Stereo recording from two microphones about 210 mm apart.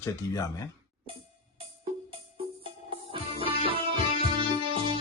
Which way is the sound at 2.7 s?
25° right (ahead or behind).